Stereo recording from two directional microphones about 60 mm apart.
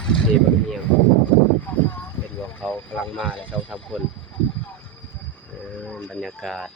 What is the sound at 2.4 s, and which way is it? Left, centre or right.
Speech, left.